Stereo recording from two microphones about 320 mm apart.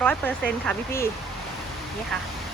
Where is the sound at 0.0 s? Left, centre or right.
Centre.